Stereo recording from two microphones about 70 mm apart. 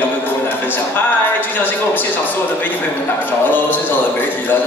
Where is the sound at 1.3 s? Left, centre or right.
Left.